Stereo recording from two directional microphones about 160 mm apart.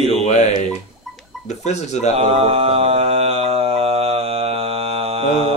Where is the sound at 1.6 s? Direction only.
45° left (ahead or behind).